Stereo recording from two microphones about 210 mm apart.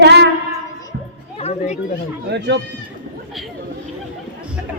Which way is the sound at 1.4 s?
30° left (ahead or behind).